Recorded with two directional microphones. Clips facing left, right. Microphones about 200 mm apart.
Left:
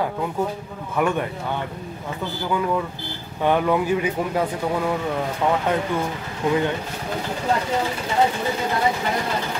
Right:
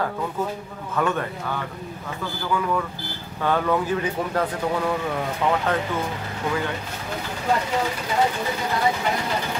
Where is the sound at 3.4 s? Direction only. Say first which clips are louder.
Left 3 dB; 15° left (ahead or behind).